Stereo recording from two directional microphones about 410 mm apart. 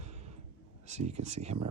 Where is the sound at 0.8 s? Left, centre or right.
Centre.